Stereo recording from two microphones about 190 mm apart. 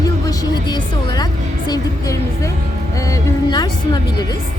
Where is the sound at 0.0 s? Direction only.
20° left (ahead or behind).